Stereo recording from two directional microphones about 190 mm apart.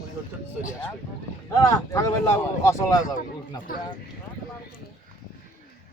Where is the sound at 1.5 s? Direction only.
15° left (ahead or behind).